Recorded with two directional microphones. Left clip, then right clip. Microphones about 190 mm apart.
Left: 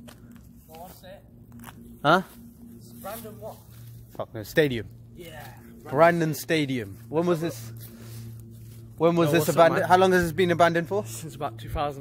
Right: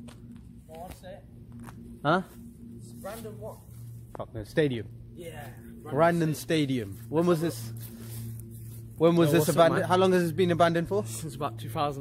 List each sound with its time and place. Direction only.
0.0 s a sound: 30° left (ahead or behind)
2.0 s a sound: 55° left (ahead or behind)
4.2 s speech: 55° left (ahead or behind)
5.9 s speech: 40° left (ahead or behind); by 6.9 s 20° left (ahead or behind)
7.1 s a man's voice: 5° left (ahead or behind)
11.1 s speech: centre (ahead or behind)
11.6 s speech: 15° right (ahead or behind)